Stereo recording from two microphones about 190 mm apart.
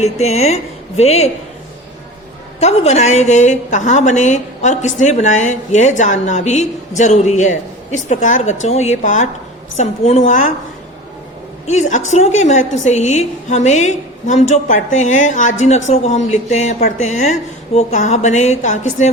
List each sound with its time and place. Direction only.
0.0 s a woman's voice: 35° left (ahead or behind)
2.6 s a woman's voice: 35° left (ahead or behind)
11.6 s a woman's voice: 35° left (ahead or behind)